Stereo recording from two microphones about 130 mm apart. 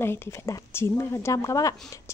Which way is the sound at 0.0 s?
20° left (ahead or behind).